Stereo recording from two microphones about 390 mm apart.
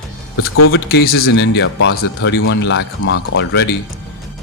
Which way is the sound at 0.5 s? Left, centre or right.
Left.